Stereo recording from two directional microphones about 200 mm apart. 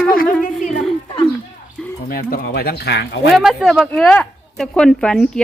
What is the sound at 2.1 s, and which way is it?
Speech, 45° left (ahead or behind).